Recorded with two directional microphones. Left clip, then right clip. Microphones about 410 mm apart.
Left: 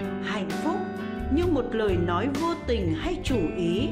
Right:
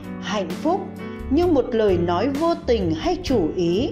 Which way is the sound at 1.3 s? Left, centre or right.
Centre.